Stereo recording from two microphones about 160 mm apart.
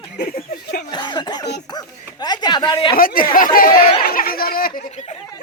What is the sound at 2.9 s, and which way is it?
Speech, 65° left (ahead or behind).